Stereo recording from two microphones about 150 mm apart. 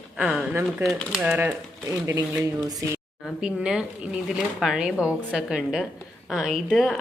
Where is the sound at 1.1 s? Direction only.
5° right (ahead or behind).